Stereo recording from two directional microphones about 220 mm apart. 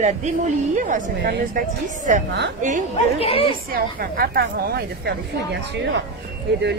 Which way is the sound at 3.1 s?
25° left (ahead or behind).